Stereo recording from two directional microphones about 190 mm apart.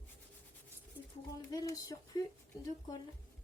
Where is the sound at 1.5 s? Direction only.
20° left (ahead or behind).